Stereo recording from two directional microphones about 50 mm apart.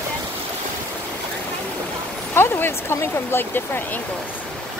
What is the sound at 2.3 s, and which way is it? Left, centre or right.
Speech, left.